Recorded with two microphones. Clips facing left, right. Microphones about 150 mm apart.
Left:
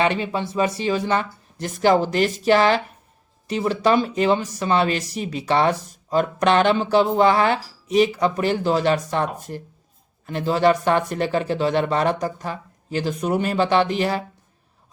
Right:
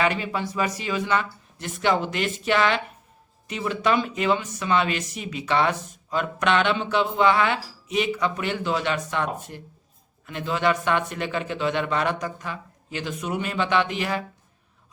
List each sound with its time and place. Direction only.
0.0 s speech: 30° left (ahead or behind)